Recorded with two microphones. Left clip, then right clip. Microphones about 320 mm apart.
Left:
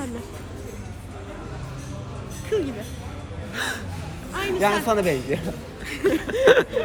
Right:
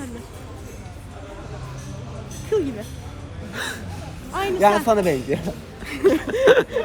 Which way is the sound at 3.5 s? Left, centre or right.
Centre.